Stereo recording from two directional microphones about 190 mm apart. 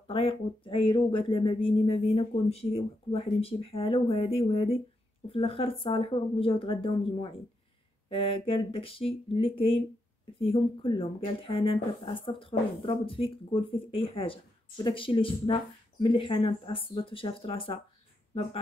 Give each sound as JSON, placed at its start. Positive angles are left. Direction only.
{"t": 0.0, "sound": "speech", "side_deg": 30}